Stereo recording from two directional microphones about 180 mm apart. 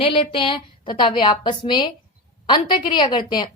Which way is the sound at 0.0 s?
30° left (ahead or behind).